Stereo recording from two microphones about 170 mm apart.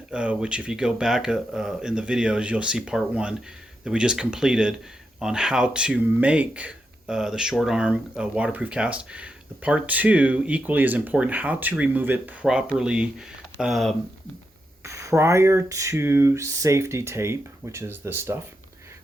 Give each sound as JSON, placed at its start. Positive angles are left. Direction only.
{"t": 0.1, "sound": "speech", "side_deg": -5}
{"t": 14.8, "sound": "speech", "side_deg": -15}